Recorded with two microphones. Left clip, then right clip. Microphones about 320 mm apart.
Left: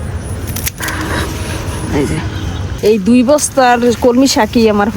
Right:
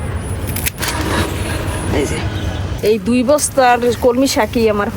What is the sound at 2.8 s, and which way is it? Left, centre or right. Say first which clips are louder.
Speech: left 4 dB; left.